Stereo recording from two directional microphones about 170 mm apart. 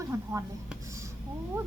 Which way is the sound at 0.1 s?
15° right (ahead or behind).